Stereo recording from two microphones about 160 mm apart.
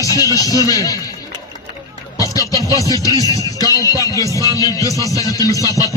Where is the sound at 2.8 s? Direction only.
20° left (ahead or behind).